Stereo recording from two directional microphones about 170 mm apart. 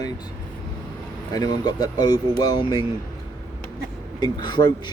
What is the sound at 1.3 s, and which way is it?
Speech, 25° left (ahead or behind).